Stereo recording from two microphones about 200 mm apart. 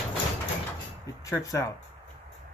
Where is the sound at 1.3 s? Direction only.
15° left (ahead or behind).